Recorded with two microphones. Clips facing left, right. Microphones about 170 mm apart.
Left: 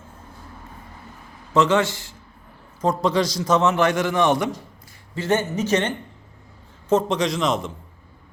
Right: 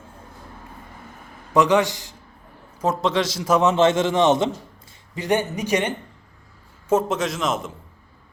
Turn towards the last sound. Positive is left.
turn(degrees=0)  # may be behind; listen again after turning